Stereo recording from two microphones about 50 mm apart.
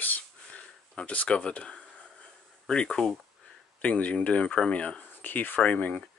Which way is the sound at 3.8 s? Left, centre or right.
Left.